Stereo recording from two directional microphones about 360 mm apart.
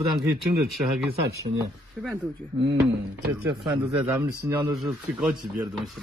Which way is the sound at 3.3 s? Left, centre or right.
Centre.